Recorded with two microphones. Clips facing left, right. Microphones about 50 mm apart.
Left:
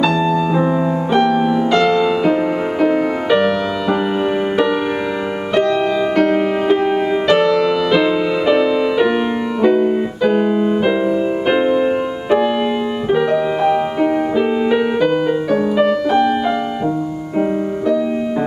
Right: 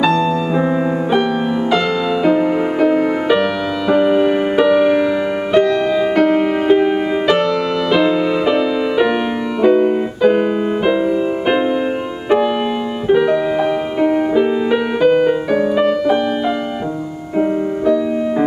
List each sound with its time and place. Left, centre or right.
0.0 s music: centre
9.6 s keyboard: centre
13.1 s music: centre
17.4 s music: centre